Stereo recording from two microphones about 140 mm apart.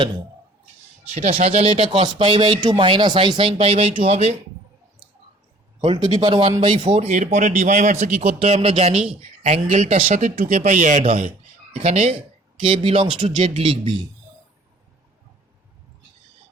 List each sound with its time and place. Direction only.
1.1 s speech: 50° right (ahead or behind)
5.8 s speech: 35° right (ahead or behind)
7.1 s a man's voice: 55° right (ahead or behind)
11.7 s speech: 50° right (ahead or behind)